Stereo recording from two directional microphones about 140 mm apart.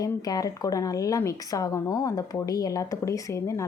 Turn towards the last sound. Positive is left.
turn(degrees=20)  # may be behind; listen again after turning